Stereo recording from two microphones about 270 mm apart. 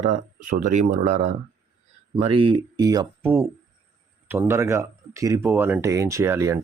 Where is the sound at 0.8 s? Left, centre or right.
Right.